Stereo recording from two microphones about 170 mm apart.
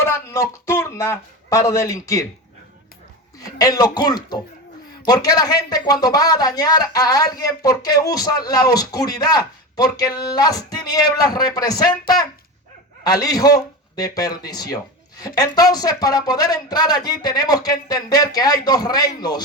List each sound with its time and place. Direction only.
0.0 s a man's voice: 15° left (ahead or behind)
3.3 s speech: 20° left (ahead or behind)